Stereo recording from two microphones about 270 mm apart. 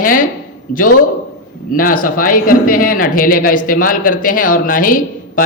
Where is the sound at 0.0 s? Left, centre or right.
Left.